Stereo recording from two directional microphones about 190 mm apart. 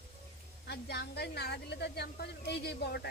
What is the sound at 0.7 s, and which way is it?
A woman's voice, 60° left (ahead or behind).